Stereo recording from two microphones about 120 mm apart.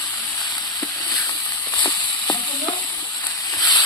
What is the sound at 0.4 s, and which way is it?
Sizzle, 35° left (ahead or behind).